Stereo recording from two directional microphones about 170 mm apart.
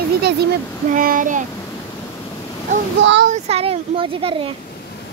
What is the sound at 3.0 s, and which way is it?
Speech, 90° right.